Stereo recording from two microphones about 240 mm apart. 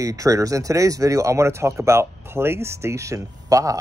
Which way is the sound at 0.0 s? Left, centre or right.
Centre.